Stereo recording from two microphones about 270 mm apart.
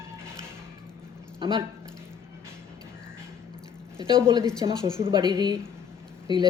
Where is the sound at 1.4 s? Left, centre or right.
Centre.